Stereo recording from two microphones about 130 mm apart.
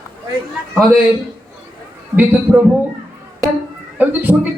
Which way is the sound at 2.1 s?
10° right (ahead or behind).